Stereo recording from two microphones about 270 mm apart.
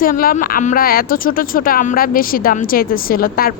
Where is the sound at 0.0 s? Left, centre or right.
Left.